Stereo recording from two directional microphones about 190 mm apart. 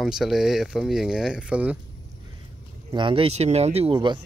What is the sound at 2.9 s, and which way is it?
Speech, 25° right (ahead or behind).